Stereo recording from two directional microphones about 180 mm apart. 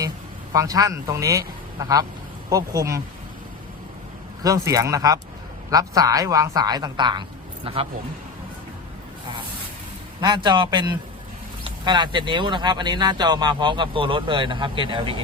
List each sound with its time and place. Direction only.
0.5 s speech: 20° right (ahead or behind)
4.4 s speech: 20° right (ahead or behind)
10.2 s speech: 25° right (ahead or behind)